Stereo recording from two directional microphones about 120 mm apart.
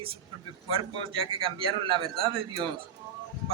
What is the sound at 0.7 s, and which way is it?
A man's voice, 45° right (ahead or behind).